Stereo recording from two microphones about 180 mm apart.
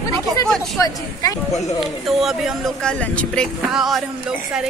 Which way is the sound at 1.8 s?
Centre (ahead or behind).